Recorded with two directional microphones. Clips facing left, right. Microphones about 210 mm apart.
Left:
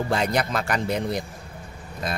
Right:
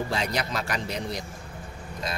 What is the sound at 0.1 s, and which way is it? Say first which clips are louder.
Speech: left 5 dB; 50° left (ahead or behind).